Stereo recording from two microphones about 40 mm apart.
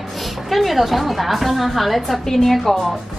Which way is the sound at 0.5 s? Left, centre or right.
Centre.